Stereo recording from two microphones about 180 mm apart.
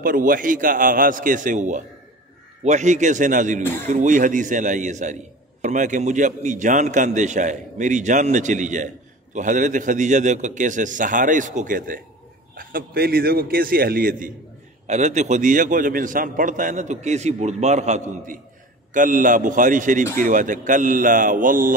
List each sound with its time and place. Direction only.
0.0 s a man's voice: 50° right (ahead or behind)
14.9 s a man's voice: 40° right (ahead or behind)